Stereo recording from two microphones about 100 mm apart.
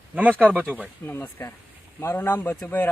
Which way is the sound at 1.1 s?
20° left (ahead or behind).